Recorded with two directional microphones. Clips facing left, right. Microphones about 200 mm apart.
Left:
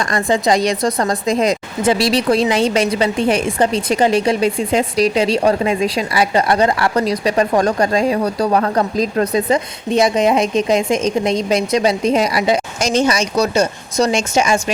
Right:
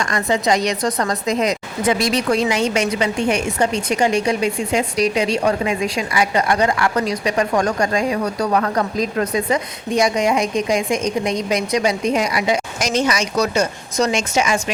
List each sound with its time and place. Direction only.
0.0 s speech: 35° left (ahead or behind)